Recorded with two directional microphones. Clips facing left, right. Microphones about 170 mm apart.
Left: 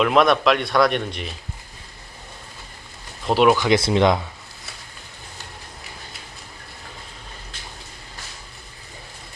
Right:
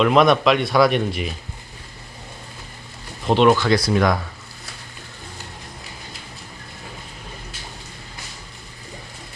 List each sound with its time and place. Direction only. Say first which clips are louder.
0.0 s speech: right 2 dB; centre (ahead or behind)
3.2 s speech: right 1 dB; 5° left (ahead or behind)
3.7 s speech: left 1 dB; 25° left (ahead or behind)